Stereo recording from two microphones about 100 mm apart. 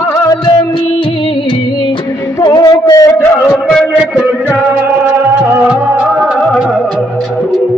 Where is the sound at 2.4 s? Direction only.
40° left (ahead or behind).